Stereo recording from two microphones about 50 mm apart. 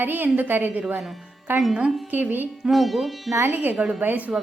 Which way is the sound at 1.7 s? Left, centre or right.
Centre.